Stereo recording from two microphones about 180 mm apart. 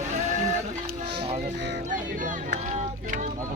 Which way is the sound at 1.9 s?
45° right (ahead or behind).